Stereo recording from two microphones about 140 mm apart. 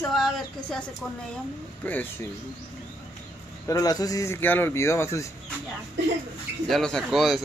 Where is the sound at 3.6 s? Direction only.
25° left (ahead or behind).